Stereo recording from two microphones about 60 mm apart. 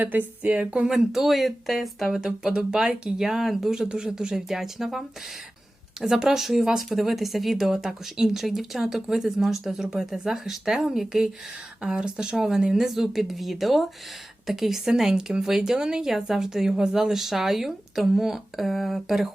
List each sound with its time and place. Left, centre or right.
0.0 s a woman's voice: right
0.9 s a woman's voice: centre